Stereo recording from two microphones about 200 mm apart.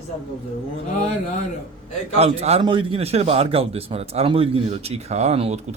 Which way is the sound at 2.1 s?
30° right (ahead or behind).